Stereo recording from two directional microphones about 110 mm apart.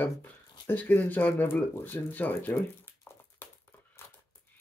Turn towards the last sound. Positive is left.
turn(degrees=20)  # may be behind; listen again after turning